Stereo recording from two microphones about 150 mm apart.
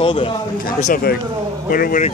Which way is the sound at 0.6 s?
70° left (ahead or behind).